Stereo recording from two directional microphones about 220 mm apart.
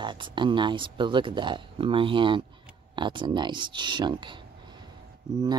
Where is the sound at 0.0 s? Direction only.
20° right (ahead or behind).